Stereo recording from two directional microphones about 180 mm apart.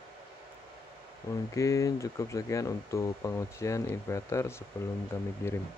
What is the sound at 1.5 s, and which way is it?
Speech, 15° left (ahead or behind).